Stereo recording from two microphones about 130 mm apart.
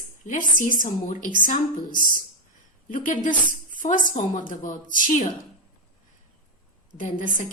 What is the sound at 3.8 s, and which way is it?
A woman's voice, 75° left (ahead or behind).